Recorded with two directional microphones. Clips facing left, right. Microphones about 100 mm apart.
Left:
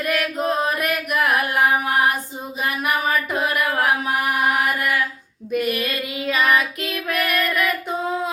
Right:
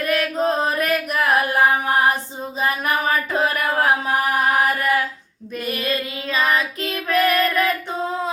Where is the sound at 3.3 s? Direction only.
30° right (ahead or behind).